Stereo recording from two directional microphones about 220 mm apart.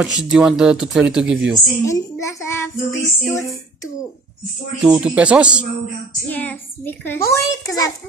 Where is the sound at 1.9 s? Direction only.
15° left (ahead or behind).